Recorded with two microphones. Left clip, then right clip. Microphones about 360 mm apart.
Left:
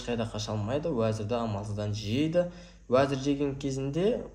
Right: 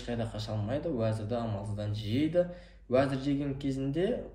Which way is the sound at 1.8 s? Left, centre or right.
Left.